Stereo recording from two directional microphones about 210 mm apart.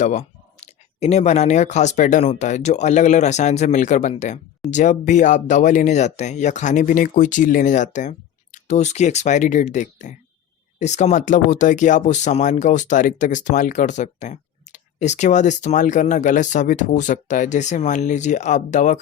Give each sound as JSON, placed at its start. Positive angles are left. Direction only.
{"t": 0.0, "sound": "speech", "side_deg": 35}